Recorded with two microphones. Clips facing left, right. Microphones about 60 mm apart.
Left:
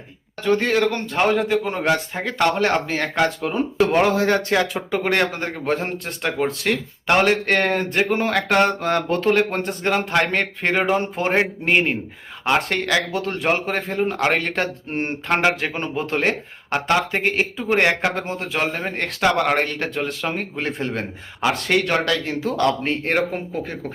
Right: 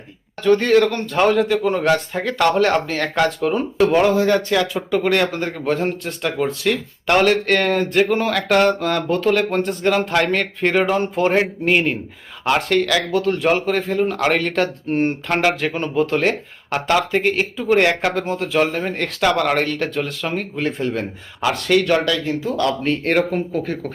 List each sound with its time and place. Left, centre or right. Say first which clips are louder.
0.4 s a man's voice: right 4 dB; centre
4.0 s speech: right 2 dB; left
7.1 s speech: right 2 dB; left
16.8 s a man's voice: right 3 dB; centre
17.2 s speech: right 3 dB; left
20.8 s speech: right 4 dB; left
21.4 s speech: right 3 dB; left
23.1 s a man's voice: right 3 dB; centre